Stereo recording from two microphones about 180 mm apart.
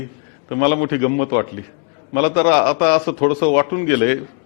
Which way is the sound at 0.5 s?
15° left (ahead or behind).